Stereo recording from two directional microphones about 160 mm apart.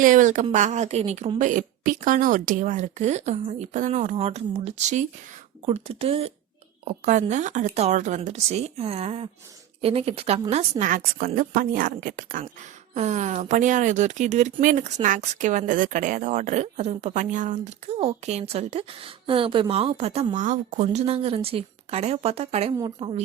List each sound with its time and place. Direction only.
0.0 s a woman's voice: 55° right (ahead or behind)
12.9 s a woman's voice: 45° right (ahead or behind)